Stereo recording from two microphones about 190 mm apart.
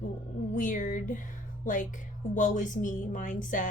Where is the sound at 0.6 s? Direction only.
45° left (ahead or behind).